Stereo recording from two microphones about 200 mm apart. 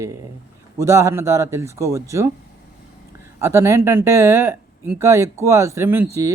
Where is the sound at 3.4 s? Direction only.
15° right (ahead or behind).